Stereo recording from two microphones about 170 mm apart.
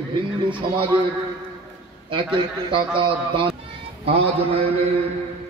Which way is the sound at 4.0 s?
35° right (ahead or behind).